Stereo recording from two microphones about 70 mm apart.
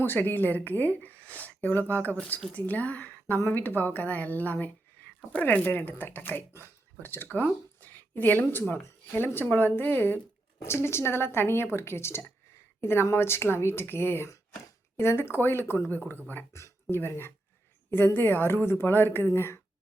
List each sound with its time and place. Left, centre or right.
0.0 s a woman's voice: left
10.6 s a woman's voice: left
16.5 s speech: left
16.9 s speech: left